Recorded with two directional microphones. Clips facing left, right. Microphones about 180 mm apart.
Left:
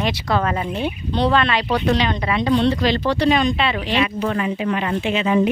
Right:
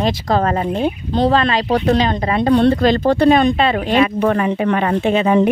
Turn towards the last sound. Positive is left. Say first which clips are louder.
# right 5 dB
turn(degrees=-50)  # may be behind; listen again after turning